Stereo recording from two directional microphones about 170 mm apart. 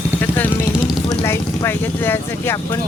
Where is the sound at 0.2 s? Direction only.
10° left (ahead or behind).